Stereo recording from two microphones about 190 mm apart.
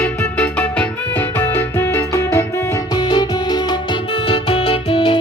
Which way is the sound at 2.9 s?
20° left (ahead or behind).